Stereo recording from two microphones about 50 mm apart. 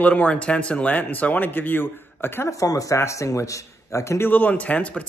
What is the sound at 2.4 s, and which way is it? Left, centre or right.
A man's voice, left.